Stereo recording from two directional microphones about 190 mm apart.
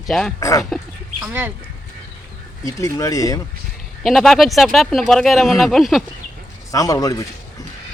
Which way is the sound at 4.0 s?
Centre (ahead or behind).